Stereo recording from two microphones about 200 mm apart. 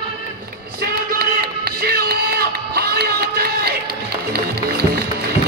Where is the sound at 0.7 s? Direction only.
55° right (ahead or behind).